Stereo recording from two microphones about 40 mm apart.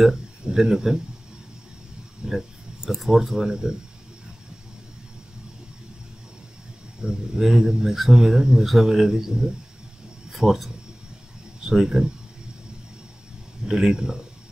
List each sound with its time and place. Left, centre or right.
0.5 s speech: centre
2.2 s a sound: centre
3.0 s speech: centre
7.0 s speech: centre
13.7 s speech: centre